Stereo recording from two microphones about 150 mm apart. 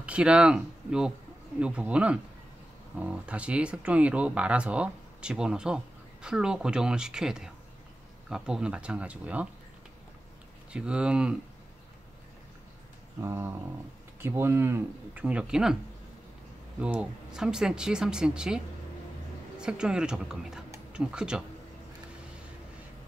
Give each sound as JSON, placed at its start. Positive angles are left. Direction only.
{"t": 0.0, "sound": "speech", "side_deg": -5}
{"t": 10.7, "sound": "speech", "side_deg": -5}
{"t": 13.2, "sound": "speech", "side_deg": -15}
{"t": 16.8, "sound": "speech", "side_deg": -10}
{"t": 19.6, "sound": "speech", "side_deg": -5}